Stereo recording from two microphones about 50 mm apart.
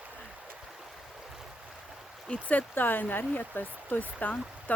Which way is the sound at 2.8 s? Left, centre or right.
Left.